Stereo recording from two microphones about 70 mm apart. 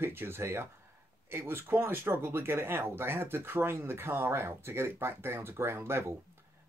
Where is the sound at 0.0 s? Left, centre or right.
Right.